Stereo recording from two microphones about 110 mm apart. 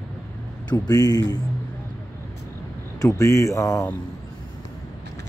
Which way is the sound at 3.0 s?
30° left (ahead or behind).